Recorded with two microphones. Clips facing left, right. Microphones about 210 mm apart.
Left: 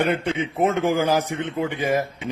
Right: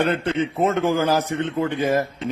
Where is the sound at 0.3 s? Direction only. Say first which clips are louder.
Right 1 dB; 15° left (ahead or behind).